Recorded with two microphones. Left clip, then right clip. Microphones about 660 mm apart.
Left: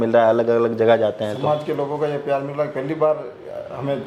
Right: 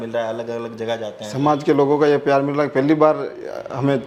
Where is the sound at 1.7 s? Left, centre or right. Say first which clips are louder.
Right 7 dB; right.